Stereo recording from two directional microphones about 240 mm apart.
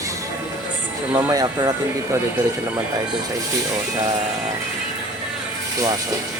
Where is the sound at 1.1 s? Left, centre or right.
Centre.